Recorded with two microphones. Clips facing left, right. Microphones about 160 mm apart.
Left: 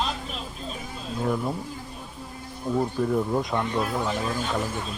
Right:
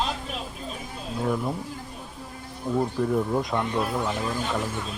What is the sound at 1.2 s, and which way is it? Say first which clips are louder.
Speech: even; centre (ahead or behind).